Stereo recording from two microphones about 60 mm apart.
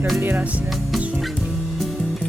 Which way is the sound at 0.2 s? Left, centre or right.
Right.